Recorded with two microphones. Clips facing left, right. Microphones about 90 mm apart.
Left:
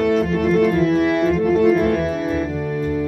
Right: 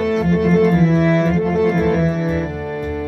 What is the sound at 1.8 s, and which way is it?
Music, 20° right (ahead or behind).